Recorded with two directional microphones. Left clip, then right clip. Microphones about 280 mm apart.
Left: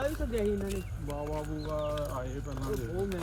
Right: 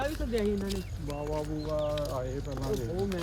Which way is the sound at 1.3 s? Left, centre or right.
Left.